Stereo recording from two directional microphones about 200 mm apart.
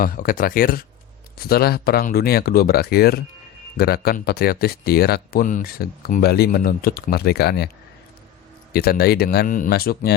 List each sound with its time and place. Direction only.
0.0 s speech: 45° left (ahead or behind)
8.7 s speech: 50° left (ahead or behind)